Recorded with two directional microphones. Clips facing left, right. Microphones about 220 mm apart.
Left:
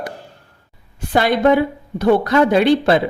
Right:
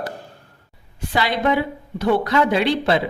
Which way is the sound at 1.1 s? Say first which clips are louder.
Left 6 dB; 50° left (ahead or behind).